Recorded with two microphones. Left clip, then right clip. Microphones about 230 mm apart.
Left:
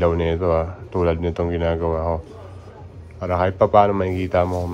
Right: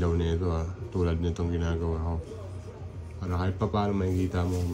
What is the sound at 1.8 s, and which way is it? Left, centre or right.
Speech, centre.